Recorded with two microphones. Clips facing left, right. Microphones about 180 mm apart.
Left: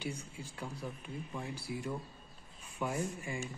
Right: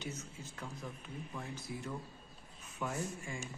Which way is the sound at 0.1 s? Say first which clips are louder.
Left 2 dB; 35° left (ahead or behind).